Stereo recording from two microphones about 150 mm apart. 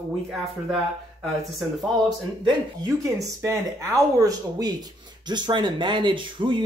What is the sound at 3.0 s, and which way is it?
Speech, 20° right (ahead or behind).